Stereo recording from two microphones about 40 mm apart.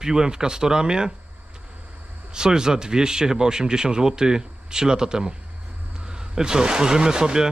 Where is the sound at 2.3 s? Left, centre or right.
Centre.